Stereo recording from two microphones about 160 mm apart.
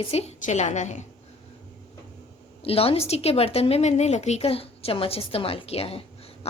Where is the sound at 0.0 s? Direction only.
40° left (ahead or behind).